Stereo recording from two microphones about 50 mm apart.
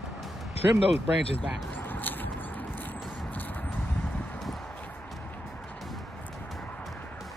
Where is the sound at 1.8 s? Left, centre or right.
Left.